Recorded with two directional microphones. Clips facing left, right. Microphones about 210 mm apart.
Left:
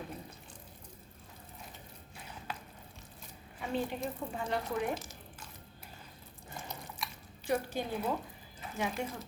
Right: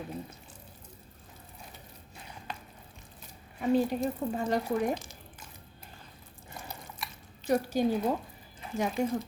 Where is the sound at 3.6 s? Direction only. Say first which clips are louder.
Right 9 dB; 40° right (ahead or behind).